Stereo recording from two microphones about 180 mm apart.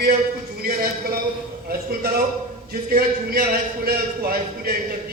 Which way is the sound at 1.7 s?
60° right (ahead or behind).